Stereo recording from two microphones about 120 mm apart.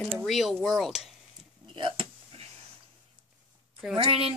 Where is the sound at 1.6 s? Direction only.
45° right (ahead or behind).